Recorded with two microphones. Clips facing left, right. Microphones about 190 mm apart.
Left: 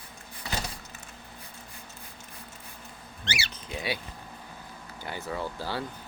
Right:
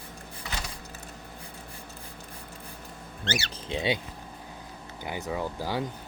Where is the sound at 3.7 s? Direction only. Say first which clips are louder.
Right 5 dB; 25° right (ahead or behind).